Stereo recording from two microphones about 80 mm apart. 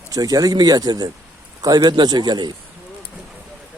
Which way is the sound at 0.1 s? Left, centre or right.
Right.